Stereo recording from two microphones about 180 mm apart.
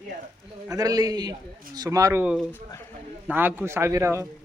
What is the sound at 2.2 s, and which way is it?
A man's voice, 5° right (ahead or behind).